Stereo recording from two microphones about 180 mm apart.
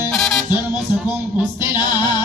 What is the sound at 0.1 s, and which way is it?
Music, centre (ahead or behind).